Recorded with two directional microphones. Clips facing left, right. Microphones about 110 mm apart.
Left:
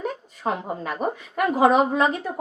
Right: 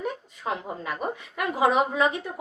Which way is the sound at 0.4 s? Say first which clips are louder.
Left 4 dB; 35° left (ahead or behind).